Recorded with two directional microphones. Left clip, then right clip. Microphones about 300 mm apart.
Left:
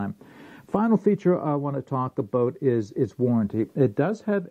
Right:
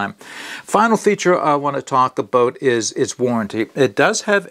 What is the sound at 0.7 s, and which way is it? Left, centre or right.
Speech, centre.